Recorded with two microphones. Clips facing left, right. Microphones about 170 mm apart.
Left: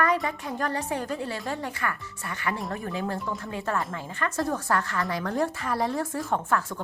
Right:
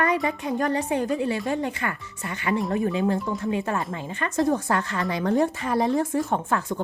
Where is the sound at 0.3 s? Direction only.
20° right (ahead or behind).